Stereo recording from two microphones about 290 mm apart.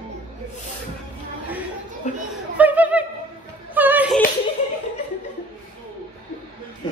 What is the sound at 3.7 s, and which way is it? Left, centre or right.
Music, centre.